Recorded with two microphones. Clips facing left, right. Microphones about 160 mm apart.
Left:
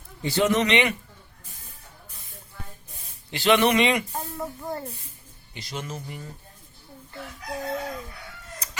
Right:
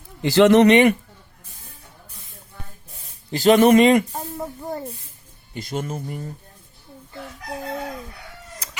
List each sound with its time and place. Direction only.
0.2 s speech: 90° right; by 0.7 s 75° right (ahead or behind)
0.7 s a man's voice: 50° right (ahead or behind)
3.3 s a man's voice: 40° right (ahead or behind)
4.1 s a sound: 15° right (ahead or behind)
5.5 s a man's voice: 50° right (ahead or behind)